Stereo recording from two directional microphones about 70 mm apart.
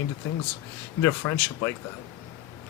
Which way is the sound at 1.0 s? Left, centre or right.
Left.